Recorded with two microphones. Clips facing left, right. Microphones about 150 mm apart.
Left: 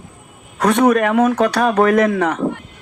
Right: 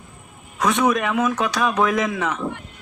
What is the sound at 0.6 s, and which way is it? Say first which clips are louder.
A woman's voice: left 6 dB; 60° left (ahead or behind).